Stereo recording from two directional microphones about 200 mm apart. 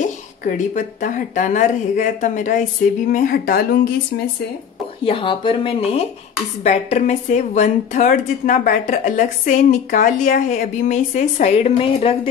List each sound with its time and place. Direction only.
0.0 s a woman's voice: 40° left (ahead or behind)
5.0 s a woman's voice: 25° left (ahead or behind)